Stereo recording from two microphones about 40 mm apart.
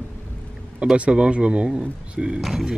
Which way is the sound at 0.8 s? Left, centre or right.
Right.